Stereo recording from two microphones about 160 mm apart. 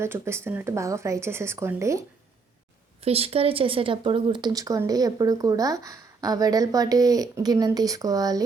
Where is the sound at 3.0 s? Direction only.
40° right (ahead or behind).